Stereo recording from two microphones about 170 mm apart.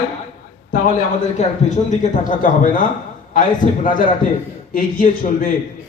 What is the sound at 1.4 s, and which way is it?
A man's voice, 45° left (ahead or behind).